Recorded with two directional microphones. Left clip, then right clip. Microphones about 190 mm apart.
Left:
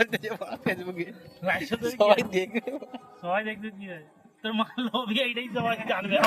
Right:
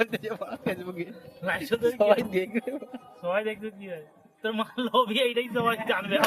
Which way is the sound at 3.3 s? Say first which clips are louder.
Left 1 dB; 15° right (ahead or behind).